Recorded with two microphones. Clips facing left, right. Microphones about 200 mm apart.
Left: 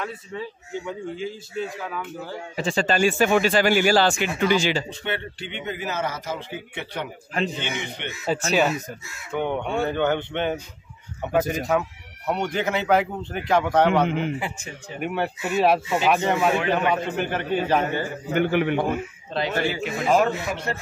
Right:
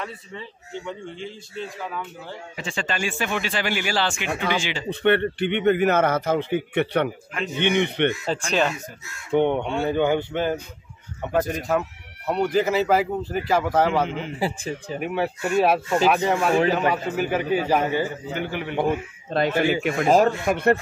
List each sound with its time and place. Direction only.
0.0 s a man's voice: 5° left (ahead or behind)
2.5 s speech: 35° left (ahead or behind)
4.8 s a man's voice: 60° right (ahead or behind)
8.1 s a man's voice: 5° left (ahead or behind)
9.3 s a man's voice: 25° right (ahead or behind); by 13.8 s centre (ahead or behind)
14.0 s a man's voice: 60° left (ahead or behind)
14.4 s speech: 35° right (ahead or behind)
15.0 s a man's voice: centre (ahead or behind)
18.3 s a man's voice: 60° left (ahead or behind)
19.3 s a man's voice: 50° right (ahead or behind)